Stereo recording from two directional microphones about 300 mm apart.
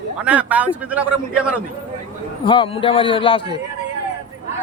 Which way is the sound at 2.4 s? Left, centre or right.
Centre.